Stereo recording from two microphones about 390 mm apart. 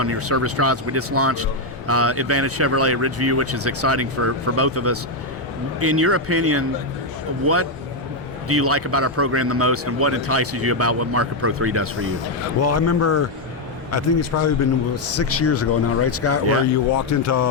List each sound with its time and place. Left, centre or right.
0.0 s a man's voice: right
12.6 s speech: left